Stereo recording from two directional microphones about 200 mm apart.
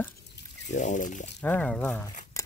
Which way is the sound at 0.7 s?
35° left (ahead or behind).